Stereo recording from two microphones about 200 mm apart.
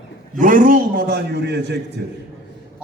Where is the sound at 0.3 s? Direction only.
40° right (ahead or behind).